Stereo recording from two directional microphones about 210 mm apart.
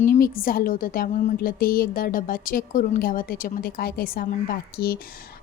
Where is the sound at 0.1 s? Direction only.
45° left (ahead or behind).